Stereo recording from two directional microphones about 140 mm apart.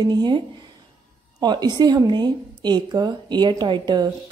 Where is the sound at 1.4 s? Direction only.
30° right (ahead or behind).